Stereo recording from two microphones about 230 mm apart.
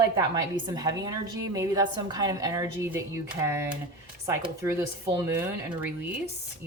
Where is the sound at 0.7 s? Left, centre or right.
Centre.